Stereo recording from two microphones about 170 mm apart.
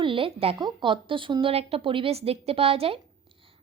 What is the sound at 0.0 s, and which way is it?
A woman's voice, 30° right (ahead or behind).